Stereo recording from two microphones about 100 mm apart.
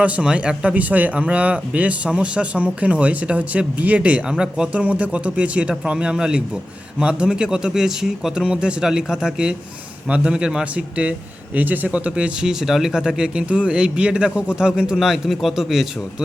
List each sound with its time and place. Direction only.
0.0 s speech: 10° right (ahead or behind)